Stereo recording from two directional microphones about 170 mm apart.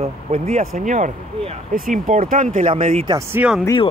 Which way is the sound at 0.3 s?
40° right (ahead or behind).